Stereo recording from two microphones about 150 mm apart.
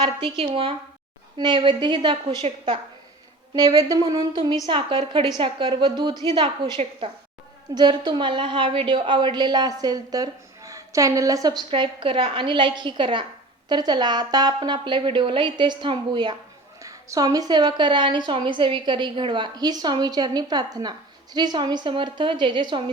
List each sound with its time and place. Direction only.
0.0 s a woman's voice: 35° right (ahead or behind)
3.5 s a woman's voice: 25° right (ahead or behind)